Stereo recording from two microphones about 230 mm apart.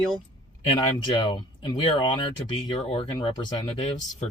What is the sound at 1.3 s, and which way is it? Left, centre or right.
Speech, left.